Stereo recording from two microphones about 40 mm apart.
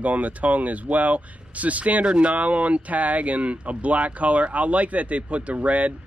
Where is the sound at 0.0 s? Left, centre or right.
Right.